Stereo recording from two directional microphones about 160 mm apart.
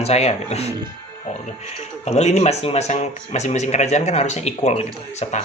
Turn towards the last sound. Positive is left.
turn(degrees=45)  # may be behind; listen again after turning